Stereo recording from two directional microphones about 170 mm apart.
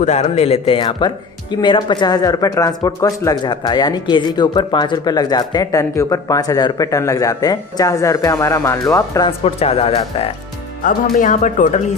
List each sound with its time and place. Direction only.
0.0 s speech: 40° left (ahead or behind); by 9.3 s 20° left (ahead or behind)
9.4 s speech: 35° left (ahead or behind)
10.8 s speech: 50° left (ahead or behind)